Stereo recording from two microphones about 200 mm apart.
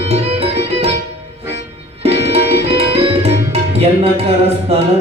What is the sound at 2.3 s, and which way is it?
Music, 30° right (ahead or behind).